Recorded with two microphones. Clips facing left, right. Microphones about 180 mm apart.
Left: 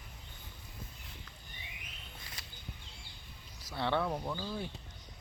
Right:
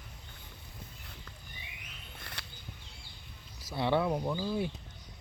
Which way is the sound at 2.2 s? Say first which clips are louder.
Right 7 dB; 65° right (ahead or behind).